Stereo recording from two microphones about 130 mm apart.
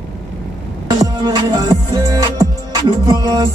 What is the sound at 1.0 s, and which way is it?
Music, 30° right (ahead or behind).